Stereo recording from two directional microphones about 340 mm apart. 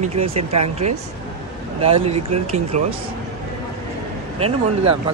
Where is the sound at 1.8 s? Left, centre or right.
Centre.